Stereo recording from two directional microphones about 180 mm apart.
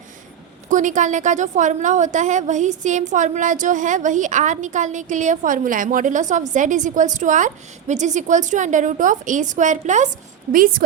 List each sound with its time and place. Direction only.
0.7 s a woman's voice: 45° right (ahead or behind)